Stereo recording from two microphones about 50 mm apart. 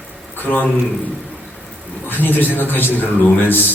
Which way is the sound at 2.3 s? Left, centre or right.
Left.